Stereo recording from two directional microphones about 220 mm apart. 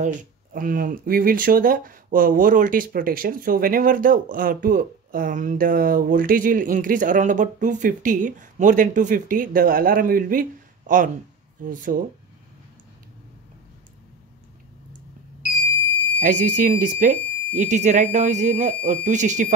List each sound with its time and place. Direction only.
0.0 s speech: 40° right (ahead or behind)
16.2 s speech: 35° right (ahead or behind)